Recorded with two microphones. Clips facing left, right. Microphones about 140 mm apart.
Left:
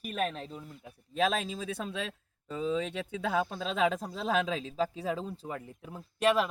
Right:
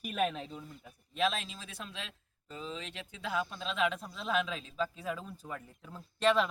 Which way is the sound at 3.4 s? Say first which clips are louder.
Left 4 dB; 40° left (ahead or behind).